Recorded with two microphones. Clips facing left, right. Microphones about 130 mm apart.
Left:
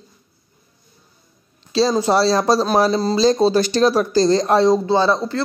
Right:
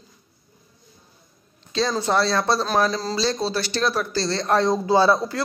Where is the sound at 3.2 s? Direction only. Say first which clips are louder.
Left 11 dB; 40° left (ahead or behind).